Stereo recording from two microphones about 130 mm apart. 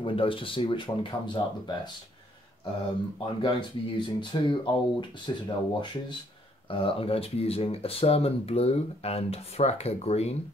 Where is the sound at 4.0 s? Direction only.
40° left (ahead or behind); by 10.4 s 55° left (ahead or behind).